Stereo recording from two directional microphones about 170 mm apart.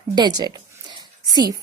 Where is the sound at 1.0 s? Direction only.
25° right (ahead or behind).